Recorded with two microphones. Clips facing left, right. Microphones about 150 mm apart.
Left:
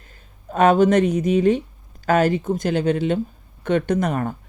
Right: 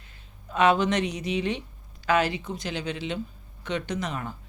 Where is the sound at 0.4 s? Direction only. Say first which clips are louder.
Left 7 dB; 50° left (ahead or behind).